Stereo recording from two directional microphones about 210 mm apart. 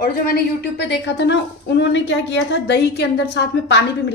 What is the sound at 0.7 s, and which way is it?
A woman's voice, 55° left (ahead or behind).